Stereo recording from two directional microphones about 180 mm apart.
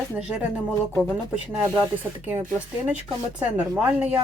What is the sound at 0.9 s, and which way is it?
Speech, 10° left (ahead or behind).